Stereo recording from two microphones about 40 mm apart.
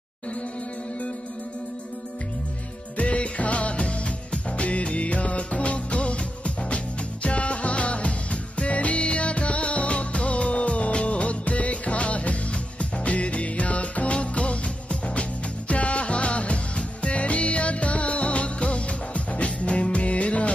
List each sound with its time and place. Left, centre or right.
3.0 s music: left